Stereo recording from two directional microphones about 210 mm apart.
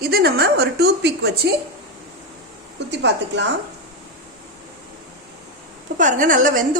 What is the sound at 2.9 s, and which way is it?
Speech, 55° right (ahead or behind).